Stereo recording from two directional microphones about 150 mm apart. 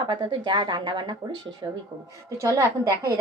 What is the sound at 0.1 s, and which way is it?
A woman's voice, 30° right (ahead or behind).